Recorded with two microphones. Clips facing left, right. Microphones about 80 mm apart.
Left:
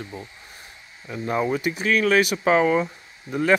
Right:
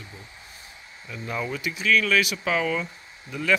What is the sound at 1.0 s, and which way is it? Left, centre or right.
Speech, left.